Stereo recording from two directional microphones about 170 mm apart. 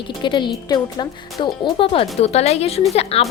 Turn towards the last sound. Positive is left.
turn(degrees=35)  # may be behind; listen again after turning